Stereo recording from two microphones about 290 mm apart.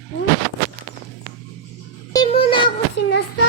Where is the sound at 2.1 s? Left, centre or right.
Centre.